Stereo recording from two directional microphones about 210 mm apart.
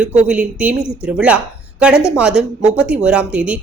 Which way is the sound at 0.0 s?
5° right (ahead or behind).